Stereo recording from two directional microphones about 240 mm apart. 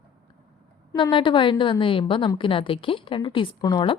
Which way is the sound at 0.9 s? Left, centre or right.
Centre.